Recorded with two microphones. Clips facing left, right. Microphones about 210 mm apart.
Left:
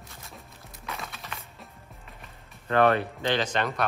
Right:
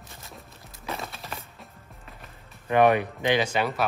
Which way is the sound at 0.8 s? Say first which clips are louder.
Right 4 dB; 30° right (ahead or behind).